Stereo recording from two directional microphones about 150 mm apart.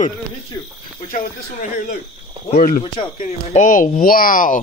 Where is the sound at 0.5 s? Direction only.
20° left (ahead or behind).